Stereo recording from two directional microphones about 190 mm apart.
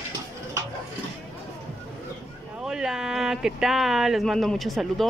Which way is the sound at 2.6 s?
5° right (ahead or behind).